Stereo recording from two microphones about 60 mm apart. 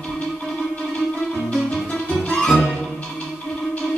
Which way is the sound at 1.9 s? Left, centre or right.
Centre.